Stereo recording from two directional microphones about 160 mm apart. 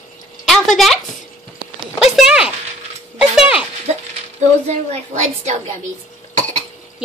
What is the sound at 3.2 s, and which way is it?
Music, 5° right (ahead or behind).